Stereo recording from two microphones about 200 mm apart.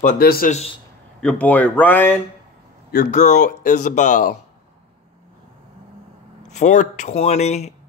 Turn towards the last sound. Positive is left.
turn(degrees=35)  # may be behind; listen again after turning